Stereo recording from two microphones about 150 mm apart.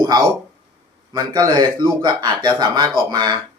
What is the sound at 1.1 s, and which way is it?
A man's voice, 25° right (ahead or behind).